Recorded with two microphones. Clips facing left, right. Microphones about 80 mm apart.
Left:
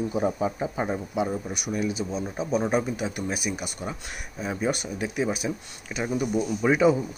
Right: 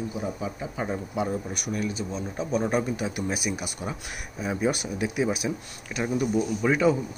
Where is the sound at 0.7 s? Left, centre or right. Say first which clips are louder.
Left 2 dB; centre.